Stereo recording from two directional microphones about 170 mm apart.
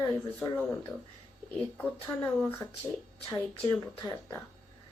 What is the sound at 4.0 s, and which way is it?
Speech, 25° left (ahead or behind).